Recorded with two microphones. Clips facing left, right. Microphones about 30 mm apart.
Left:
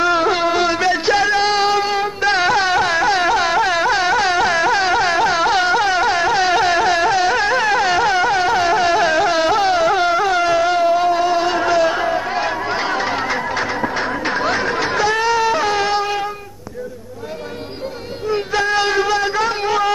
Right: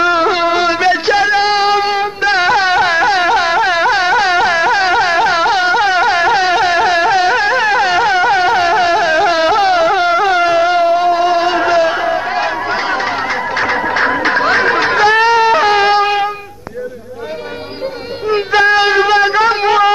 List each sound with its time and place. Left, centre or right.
0.0 s music: centre
13.9 s music: right
14.4 s snicker: right
18.3 s child singing: right
18.7 s shofar: right